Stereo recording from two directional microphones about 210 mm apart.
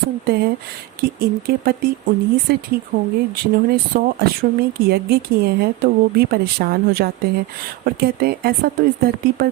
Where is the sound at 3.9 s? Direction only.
45° right (ahead or behind).